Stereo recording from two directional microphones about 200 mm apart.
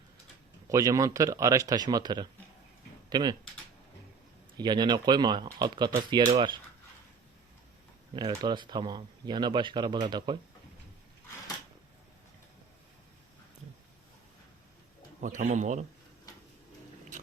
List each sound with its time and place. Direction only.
0.7 s speech: 15° right (ahead or behind)
4.5 s speech: 20° right (ahead or behind)
8.1 s speech: 20° right (ahead or behind)
15.2 s a man's voice: 40° right (ahead or behind)